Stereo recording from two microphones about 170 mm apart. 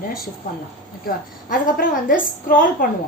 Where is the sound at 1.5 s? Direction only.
55° left (ahead or behind).